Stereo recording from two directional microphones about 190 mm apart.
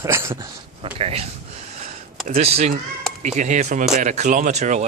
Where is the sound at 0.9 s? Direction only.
30° right (ahead or behind).